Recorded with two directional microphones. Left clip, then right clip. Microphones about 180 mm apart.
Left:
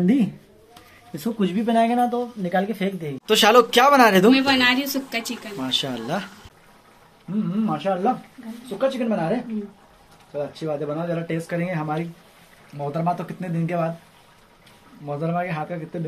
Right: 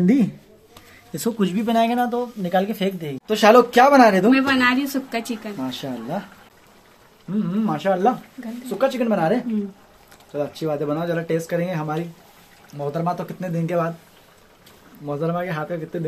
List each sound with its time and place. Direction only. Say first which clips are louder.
0.0 s speech: right 2 dB; 15° right (ahead or behind)
4.3 s a woman's voice: even; 55° right (ahead or behind)
5.6 s speech: left 8 dB; 10° right (ahead or behind)
7.6 s speech: right 3 dB; 35° right (ahead or behind); by 13.8 s 20° right (ahead or behind)
15.0 s speech: right 1 dB; 15° right (ahead or behind)